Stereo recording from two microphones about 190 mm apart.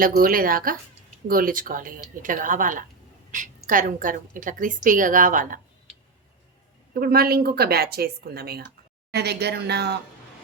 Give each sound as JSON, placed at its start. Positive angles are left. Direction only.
{"t": 0.2, "sound": "a woman's voice", "side_deg": -50}
{"t": 7.0, "sound": "speech", "side_deg": -55}